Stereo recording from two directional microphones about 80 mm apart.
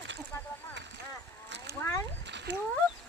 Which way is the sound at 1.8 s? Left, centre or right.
Left.